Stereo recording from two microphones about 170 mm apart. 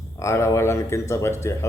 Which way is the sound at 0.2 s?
15° left (ahead or behind).